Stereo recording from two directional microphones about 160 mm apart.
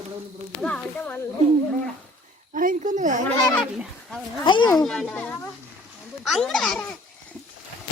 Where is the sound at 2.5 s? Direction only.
55° right (ahead or behind).